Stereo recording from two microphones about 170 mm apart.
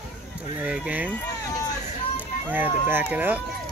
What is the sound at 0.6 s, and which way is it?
Speech, 10° right (ahead or behind).